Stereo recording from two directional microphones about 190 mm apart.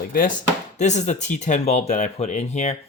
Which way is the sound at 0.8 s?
40° left (ahead or behind).